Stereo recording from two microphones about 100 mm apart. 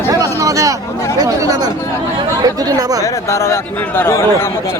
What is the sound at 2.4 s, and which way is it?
Speech, 40° right (ahead or behind).